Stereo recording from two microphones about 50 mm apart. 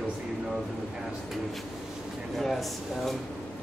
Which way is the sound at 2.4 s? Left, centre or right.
Centre.